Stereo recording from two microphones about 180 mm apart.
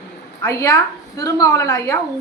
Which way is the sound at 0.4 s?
15° left (ahead or behind).